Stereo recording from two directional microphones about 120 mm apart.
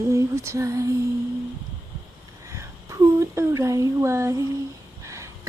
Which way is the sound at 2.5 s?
25° right (ahead or behind).